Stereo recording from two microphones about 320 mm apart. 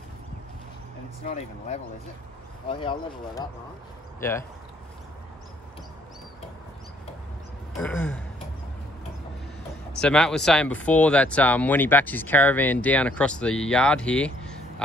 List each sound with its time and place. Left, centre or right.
1.2 s speech: left
7.8 s speech: centre
9.9 s speech: centre